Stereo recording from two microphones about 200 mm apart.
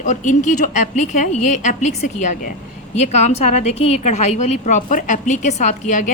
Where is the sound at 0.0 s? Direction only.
40° left (ahead or behind).